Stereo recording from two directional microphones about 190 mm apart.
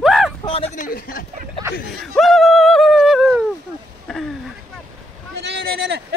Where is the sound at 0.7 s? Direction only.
45° left (ahead or behind).